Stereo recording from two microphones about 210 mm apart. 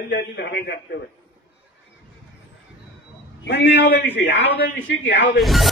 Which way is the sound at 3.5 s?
55° left (ahead or behind).